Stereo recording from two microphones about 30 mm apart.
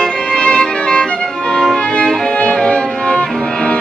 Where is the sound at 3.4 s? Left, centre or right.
Left.